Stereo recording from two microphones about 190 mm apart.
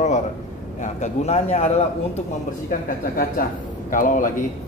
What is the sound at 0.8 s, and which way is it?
Speech, 35° left (ahead or behind).